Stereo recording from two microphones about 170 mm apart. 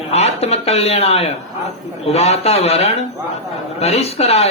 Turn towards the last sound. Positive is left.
turn(degrees=35)  # may be behind; listen again after turning